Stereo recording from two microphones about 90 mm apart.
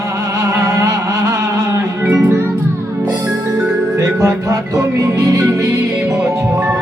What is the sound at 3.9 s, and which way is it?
Music, 35° right (ahead or behind).